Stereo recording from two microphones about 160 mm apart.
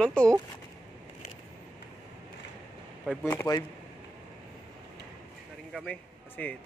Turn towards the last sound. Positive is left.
turn(degrees=10)  # may be behind; listen again after turning